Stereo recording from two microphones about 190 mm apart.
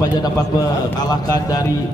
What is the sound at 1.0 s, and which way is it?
Speech, 20° left (ahead or behind).